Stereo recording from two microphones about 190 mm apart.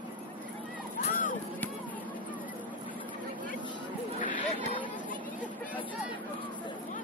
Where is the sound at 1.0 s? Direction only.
40° left (ahead or behind).